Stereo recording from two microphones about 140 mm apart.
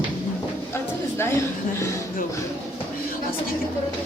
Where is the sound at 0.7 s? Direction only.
15° left (ahead or behind).